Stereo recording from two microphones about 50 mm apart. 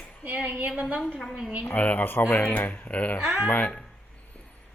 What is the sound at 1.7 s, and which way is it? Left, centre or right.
Speech, left.